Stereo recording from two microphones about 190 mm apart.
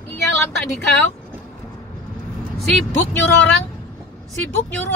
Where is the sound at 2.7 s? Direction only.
5° left (ahead or behind).